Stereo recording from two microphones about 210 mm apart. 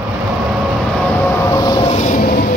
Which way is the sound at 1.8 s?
35° left (ahead or behind).